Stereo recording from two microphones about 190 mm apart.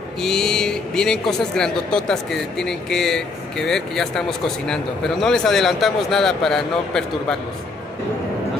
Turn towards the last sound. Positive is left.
turn(degrees=0)  # may be behind; listen again after turning